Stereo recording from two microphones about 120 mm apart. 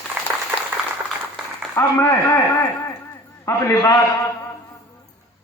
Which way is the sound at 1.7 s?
25° left (ahead or behind).